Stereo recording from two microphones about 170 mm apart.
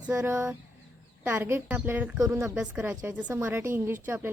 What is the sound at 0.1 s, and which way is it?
A woman's voice, 15° right (ahead or behind).